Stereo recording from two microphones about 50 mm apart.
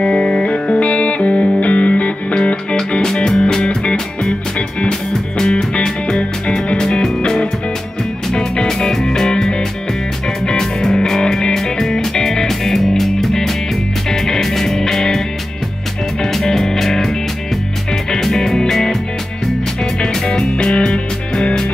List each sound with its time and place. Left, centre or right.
0.0 s music: centre
18.1 s music: centre